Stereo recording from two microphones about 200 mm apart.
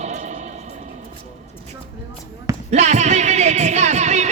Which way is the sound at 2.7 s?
35° right (ahead or behind).